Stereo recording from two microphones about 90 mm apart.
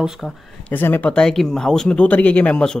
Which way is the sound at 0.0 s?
5° right (ahead or behind).